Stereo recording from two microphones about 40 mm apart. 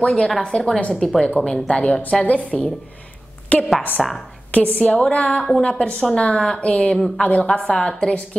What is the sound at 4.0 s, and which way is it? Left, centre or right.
Speech, centre.